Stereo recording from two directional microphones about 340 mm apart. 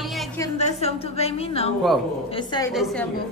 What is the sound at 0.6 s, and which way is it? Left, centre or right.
A woman's voice, centre.